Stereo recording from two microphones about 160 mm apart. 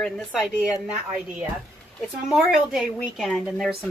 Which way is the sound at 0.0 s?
Centre (ahead or behind).